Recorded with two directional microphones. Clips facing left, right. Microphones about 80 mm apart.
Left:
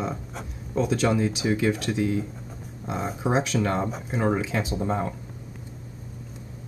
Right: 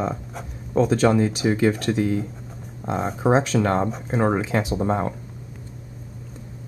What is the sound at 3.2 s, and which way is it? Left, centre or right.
Speech, right.